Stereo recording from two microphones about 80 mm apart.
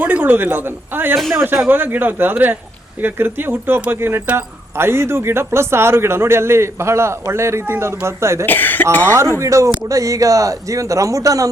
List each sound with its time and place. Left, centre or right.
0.0 s speech: right
8.4 s speech: left
9.4 s a man's voice: right